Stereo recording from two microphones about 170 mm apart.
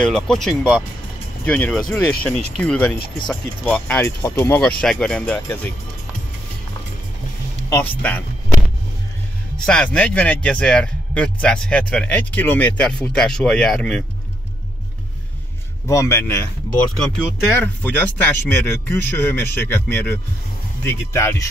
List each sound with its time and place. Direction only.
0.0 s a man's voice: 5° left (ahead or behind)
7.7 s a man's voice: 10° left (ahead or behind)
9.7 s a man's voice: 5° left (ahead or behind)
15.9 s a man's voice: 15° left (ahead or behind)
17.5 s a man's voice: 10° left (ahead or behind)